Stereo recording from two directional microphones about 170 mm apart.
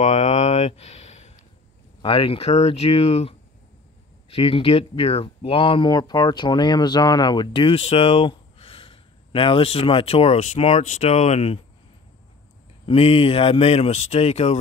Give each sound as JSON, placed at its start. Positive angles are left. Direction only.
{"t": 0.0, "sound": "a sound", "side_deg": 45}
{"t": 2.0, "sound": "speech", "side_deg": 30}
{"t": 12.8, "sound": "speech", "side_deg": 35}